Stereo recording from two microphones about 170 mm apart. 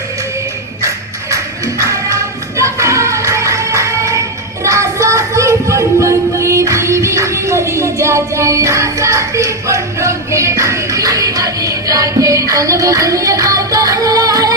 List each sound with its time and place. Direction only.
1.3 s music: 20° right (ahead or behind)